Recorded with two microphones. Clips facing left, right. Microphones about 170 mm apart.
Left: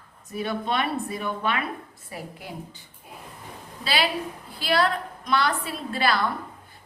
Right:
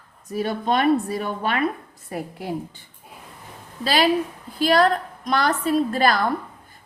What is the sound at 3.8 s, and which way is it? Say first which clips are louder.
A woman's voice: right 7 dB; 45° right (ahead or behind).